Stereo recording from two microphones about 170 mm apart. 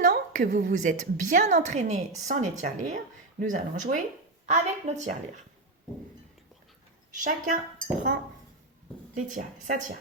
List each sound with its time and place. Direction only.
0.3 s a woman's voice: 45° right (ahead or behind)
7.1 s a woman's voice: 50° right (ahead or behind)
9.1 s a woman's voice: 50° right (ahead or behind)